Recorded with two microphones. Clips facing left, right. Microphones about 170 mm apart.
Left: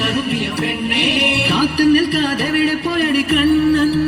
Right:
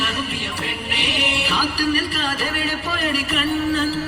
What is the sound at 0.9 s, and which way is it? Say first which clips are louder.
Music: left 5 dB; 65° left (ahead or behind).